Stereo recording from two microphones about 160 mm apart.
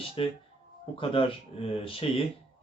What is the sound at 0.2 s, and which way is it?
Speech, 35° left (ahead or behind).